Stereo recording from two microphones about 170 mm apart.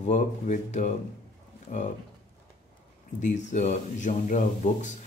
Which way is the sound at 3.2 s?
45° left (ahead or behind).